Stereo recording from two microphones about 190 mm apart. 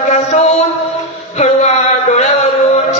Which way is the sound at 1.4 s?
35° left (ahead or behind).